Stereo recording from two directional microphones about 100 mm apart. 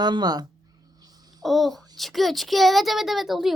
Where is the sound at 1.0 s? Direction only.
40° right (ahead or behind).